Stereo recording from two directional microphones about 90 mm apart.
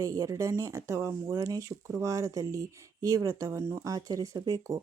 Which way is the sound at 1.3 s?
40° right (ahead or behind).